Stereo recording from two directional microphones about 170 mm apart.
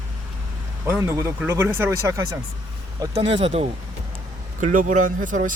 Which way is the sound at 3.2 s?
35° right (ahead or behind).